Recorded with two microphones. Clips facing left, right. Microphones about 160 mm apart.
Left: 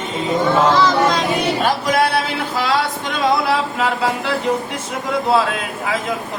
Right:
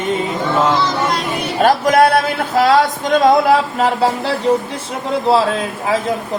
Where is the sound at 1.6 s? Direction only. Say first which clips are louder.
Right 10 dB; 50° right (ahead or behind); by 5.9 s 30° right (ahead or behind).